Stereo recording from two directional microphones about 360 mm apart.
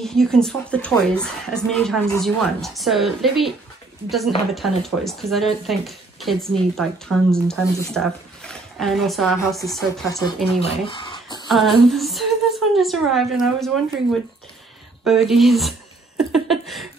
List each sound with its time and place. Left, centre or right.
0.0 s speech: centre
4.6 s speech: centre
10.7 s a sound: centre
11.4 s a woman's voice: centre
15.0 s speech: centre
16.2 s a sound: centre